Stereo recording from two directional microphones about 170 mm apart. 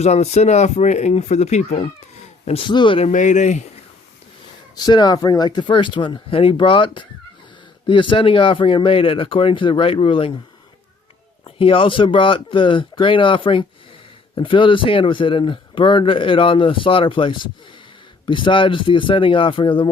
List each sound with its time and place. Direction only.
0.0 s speech: 40° left (ahead or behind)
3.1 s speech: 45° left (ahead or behind)
4.7 s speech: 25° left (ahead or behind)
11.4 s speech: 30° left (ahead or behind)